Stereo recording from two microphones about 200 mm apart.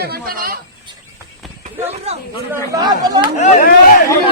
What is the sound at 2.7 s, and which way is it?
Speech, 20° right (ahead or behind).